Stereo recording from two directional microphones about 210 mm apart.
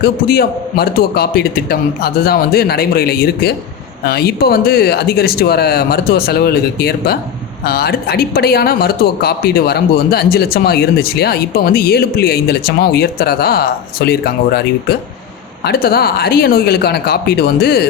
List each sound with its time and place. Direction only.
0.0 s speech: 45° left (ahead or behind)